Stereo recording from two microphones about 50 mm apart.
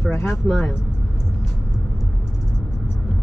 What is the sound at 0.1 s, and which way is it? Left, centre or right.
Speech, left.